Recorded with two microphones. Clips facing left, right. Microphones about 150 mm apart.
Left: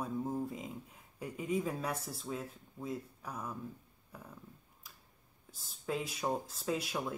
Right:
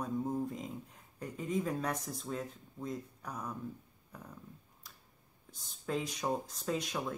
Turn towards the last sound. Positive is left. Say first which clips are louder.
# even
turn(degrees=5)  # may be behind; listen again after turning